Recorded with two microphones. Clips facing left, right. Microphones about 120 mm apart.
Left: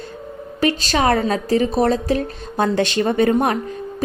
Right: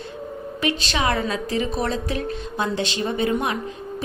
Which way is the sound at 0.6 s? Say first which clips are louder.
Left 6 dB; 40° left (ahead or behind).